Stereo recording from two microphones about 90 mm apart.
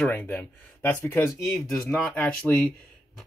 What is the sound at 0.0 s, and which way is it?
Speech, 20° left (ahead or behind).